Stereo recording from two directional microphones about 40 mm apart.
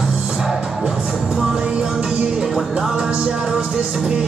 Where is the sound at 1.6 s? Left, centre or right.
Right.